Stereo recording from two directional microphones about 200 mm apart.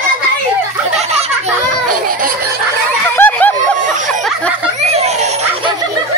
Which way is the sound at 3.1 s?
10° left (ahead or behind).